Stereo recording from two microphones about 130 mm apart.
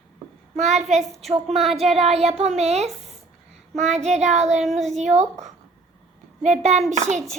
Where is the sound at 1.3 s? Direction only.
50° right (ahead or behind).